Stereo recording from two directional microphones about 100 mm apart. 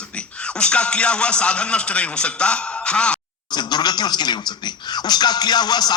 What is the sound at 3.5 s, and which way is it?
Speech, 45° left (ahead or behind).